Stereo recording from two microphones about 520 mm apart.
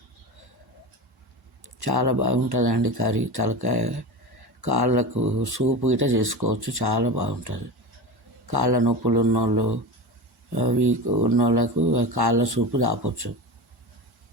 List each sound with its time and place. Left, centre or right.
1.8 s speech: right
6.1 s speech: right
8.4 s speech: right
10.8 s speech: right
11.3 s speech: right